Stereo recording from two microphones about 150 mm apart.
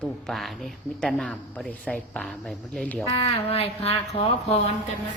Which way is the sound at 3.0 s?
40° left (ahead or behind).